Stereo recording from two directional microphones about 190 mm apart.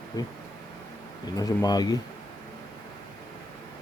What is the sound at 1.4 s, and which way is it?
Speech, 20° left (ahead or behind).